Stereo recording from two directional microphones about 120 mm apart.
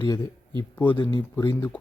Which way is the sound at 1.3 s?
25° left (ahead or behind).